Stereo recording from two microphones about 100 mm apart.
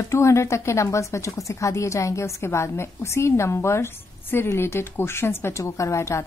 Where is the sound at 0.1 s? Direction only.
30° left (ahead or behind).